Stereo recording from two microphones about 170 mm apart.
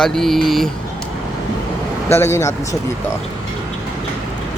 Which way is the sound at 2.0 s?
15° left (ahead or behind).